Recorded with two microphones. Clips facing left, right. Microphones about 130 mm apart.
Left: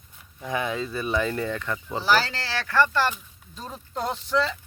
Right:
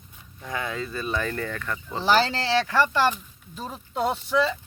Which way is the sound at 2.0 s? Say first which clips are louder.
Right 3 dB; 25° right (ahead or behind).